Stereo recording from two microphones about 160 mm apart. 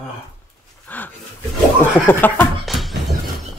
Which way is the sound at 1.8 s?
10° left (ahead or behind).